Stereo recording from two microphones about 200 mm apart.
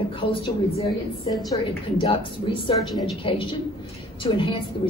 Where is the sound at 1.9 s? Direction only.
25° left (ahead or behind).